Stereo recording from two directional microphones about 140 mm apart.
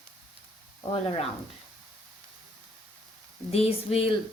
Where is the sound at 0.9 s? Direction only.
40° left (ahead or behind).